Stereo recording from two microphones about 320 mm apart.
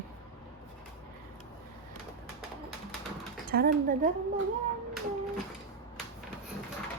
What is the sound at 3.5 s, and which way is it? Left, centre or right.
Speech, right.